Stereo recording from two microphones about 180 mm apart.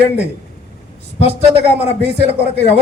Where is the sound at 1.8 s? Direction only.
35° left (ahead or behind).